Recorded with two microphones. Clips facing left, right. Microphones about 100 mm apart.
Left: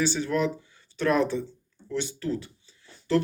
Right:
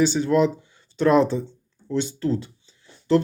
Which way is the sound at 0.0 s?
20° right (ahead or behind).